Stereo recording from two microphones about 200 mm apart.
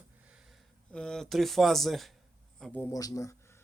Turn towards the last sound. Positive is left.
turn(degrees=15)  # may be behind; listen again after turning